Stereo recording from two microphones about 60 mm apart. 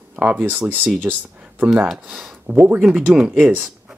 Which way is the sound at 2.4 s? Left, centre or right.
Right.